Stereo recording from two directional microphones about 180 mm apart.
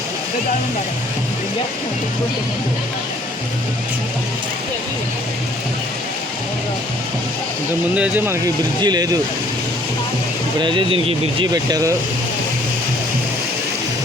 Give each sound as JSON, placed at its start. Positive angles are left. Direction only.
{"t": 7.9, "sound": "speech", "side_deg": -10}
{"t": 8.8, "sound": "speech", "side_deg": -20}
{"t": 10.6, "sound": "speech", "side_deg": -25}